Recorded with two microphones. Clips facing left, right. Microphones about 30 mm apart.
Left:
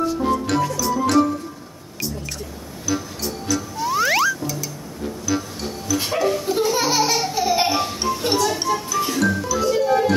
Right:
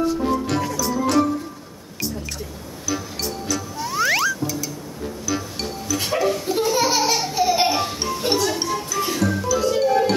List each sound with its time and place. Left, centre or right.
0.2 s music: centre
2.9 s music: centre
5.9 s laughter: centre
9.3 s music: centre